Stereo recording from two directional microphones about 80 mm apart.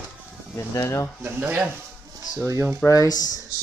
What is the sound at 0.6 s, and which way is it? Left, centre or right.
Speech, left.